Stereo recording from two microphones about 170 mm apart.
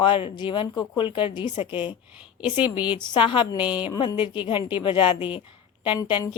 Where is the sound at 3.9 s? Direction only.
20° left (ahead or behind).